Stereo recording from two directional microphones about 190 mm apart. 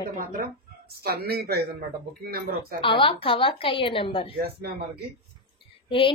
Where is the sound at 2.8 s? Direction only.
25° left (ahead or behind).